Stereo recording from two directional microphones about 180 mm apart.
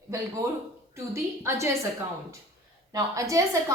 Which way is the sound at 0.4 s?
15° right (ahead or behind).